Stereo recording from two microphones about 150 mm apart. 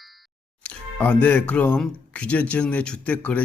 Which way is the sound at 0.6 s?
10° left (ahead or behind).